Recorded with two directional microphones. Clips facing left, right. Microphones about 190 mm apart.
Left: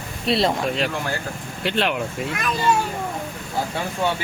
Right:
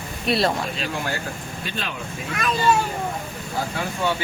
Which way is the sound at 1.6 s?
75° left (ahead or behind).